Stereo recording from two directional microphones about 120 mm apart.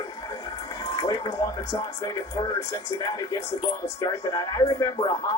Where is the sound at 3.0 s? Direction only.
30° left (ahead or behind).